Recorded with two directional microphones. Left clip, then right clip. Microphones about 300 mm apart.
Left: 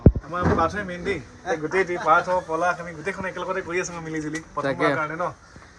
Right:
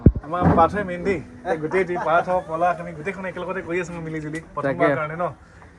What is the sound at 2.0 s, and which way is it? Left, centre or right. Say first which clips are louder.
A man's voice: left 2 dB; centre.